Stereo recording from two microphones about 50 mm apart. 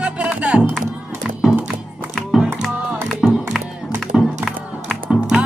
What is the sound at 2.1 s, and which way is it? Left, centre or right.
Music, centre.